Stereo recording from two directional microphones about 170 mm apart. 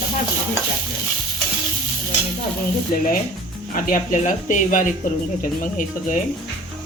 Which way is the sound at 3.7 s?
50° left (ahead or behind).